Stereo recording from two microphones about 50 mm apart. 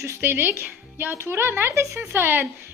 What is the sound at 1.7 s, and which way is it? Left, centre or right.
Speech, right.